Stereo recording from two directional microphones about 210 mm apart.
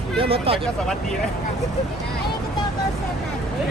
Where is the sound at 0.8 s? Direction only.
Centre (ahead or behind).